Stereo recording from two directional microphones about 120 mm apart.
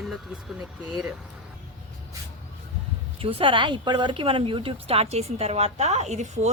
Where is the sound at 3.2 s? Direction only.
45° right (ahead or behind).